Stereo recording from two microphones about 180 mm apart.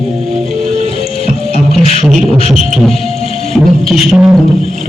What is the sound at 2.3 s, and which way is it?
Beatboxing, 35° left (ahead or behind).